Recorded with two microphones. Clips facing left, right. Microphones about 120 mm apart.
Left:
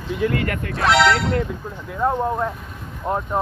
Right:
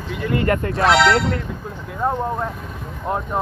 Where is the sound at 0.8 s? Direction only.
Centre (ahead or behind).